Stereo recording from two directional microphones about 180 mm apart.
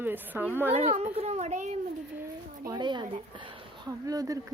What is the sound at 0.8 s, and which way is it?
Speech, 35° right (ahead or behind).